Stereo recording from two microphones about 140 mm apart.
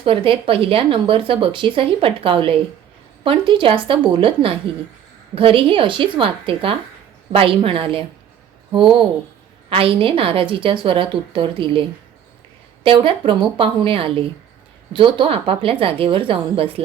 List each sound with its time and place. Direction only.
0.0 s speech: 40° right (ahead or behind)